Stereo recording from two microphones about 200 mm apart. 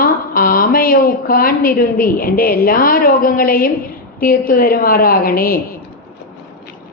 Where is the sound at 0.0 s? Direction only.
45° left (ahead or behind).